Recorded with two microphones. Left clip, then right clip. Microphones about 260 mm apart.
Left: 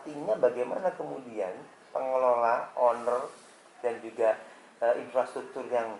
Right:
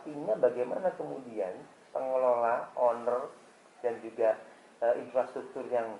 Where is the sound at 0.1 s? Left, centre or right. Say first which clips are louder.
Left 2 dB; right.